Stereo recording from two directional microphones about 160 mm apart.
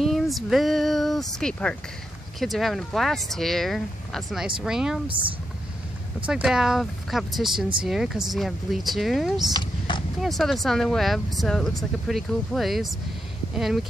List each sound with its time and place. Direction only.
0.0 s a sound: centre (ahead or behind)
2.4 s speech: centre (ahead or behind)
5.0 s speech: 35° right (ahead or behind)
6.2 s speech: 5° right (ahead or behind)
9.5 s a sound: 30° left (ahead or behind)
10.2 s speech: centre (ahead or behind)